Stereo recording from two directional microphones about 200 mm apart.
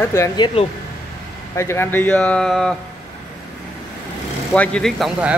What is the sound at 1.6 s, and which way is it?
Speech, 15° left (ahead or behind).